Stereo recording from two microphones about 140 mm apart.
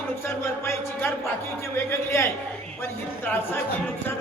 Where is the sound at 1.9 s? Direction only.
20° left (ahead or behind).